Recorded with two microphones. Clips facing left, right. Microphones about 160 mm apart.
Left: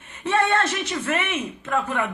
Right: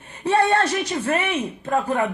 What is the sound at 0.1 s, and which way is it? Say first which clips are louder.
A man's voice: right 3 dB; 35° right (ahead or behind).